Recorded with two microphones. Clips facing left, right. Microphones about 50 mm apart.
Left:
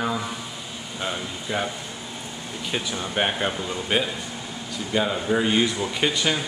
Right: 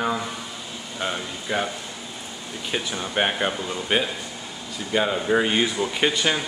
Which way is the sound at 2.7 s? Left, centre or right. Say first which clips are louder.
Right 1 dB; centre.